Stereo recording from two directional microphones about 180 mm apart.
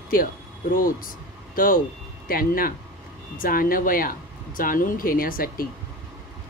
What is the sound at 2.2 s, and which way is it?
Speech, 55° left (ahead or behind).